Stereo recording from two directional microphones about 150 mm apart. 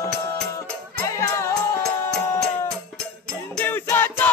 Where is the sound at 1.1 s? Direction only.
20° left (ahead or behind).